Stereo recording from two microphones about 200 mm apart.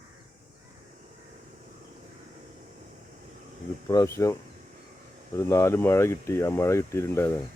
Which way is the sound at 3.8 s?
15° left (ahead or behind).